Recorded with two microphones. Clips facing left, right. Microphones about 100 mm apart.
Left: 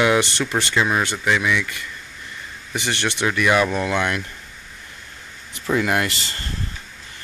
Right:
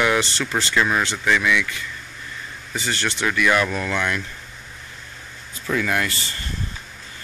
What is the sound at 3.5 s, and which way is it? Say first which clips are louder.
Speech: left 2 dB; 15° left (ahead or behind).